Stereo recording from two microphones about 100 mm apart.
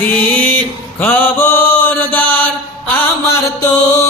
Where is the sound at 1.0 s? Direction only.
20° left (ahead or behind).